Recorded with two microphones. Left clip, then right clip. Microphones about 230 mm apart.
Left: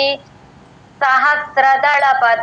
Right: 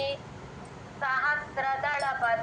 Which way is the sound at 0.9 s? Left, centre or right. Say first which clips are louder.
Left 15 dB; left.